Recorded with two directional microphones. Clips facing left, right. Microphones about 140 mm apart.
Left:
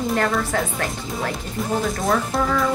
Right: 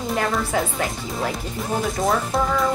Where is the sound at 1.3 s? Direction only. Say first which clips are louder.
Left 1 dB; centre (ahead or behind).